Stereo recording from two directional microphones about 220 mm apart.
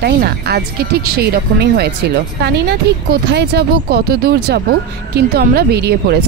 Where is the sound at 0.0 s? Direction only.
45° right (ahead or behind).